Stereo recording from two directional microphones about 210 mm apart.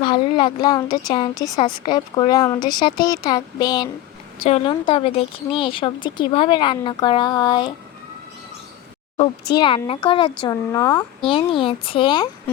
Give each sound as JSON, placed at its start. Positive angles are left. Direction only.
{"t": 0.0, "sound": "speech", "side_deg": 20}
{"t": 9.6, "sound": "speech", "side_deg": 25}
{"t": 11.2, "sound": "speech", "side_deg": 25}